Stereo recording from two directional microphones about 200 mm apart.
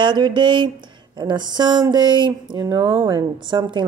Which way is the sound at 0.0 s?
20° right (ahead or behind).